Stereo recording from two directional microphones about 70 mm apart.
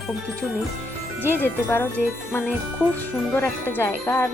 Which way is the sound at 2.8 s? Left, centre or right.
Left.